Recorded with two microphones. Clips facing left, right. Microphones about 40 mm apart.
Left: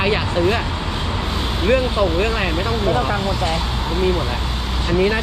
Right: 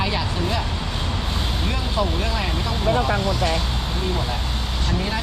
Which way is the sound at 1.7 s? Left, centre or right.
Left.